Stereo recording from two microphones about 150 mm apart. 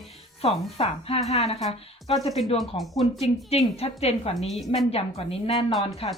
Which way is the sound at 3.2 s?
45° left (ahead or behind).